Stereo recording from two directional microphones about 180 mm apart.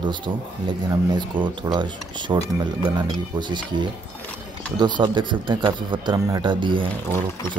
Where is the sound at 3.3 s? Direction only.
25° right (ahead or behind).